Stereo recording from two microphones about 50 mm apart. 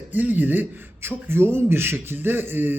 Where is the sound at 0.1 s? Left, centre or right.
Right.